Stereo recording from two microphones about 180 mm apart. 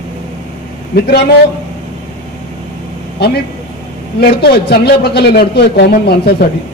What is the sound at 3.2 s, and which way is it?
A man's voice, 70° left (ahead or behind).